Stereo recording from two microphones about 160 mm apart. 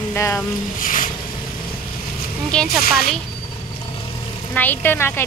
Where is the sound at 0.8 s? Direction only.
55° left (ahead or behind).